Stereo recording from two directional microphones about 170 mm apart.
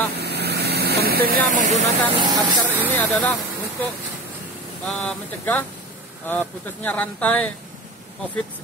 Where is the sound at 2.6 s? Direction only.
10° right (ahead or behind).